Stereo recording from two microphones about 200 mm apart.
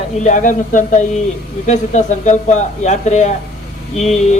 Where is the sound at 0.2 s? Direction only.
40° left (ahead or behind).